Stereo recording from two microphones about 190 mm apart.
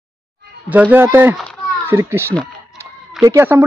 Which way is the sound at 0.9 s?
10° right (ahead or behind).